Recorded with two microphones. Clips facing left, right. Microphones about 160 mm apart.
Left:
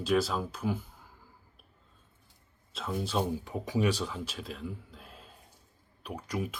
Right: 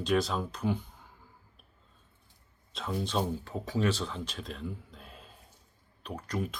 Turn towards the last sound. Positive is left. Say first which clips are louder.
# even
turn(degrees=10)  # may be behind; listen again after turning